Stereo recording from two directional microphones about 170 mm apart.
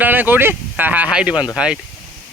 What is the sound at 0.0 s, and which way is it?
Speech, 10° right (ahead or behind).